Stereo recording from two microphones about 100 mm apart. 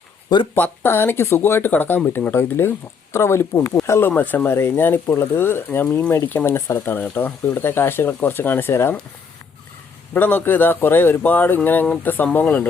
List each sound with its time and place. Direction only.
0.5 s speech: 15° left (ahead or behind)
4.1 s speech: 15° left (ahead or behind)
10.2 s speech: 20° left (ahead or behind)